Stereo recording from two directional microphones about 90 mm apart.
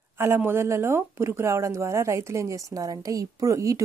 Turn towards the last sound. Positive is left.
turn(degrees=-35)  # may be behind; listen again after turning